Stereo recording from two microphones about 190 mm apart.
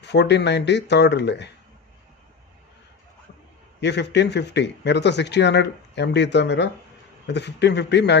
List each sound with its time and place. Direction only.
0.0 s speech: 65° left (ahead or behind)
3.8 s speech: 65° left (ahead or behind)